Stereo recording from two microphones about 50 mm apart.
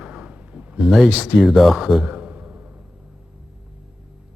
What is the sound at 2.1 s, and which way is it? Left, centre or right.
Sigh, right.